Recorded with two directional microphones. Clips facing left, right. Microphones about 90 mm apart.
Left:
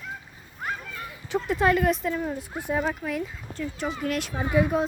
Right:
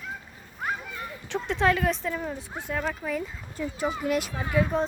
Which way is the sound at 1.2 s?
10° left (ahead or behind).